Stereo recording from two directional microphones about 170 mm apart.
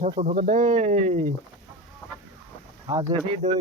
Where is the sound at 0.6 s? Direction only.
30° right (ahead or behind).